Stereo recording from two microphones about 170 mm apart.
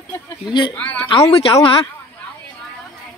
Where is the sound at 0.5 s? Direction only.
25° left (ahead or behind).